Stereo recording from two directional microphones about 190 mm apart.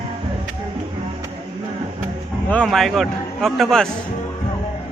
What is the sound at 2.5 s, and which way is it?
A man's voice, 5° left (ahead or behind).